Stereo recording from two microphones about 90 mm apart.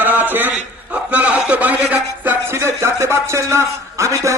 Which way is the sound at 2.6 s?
30° right (ahead or behind).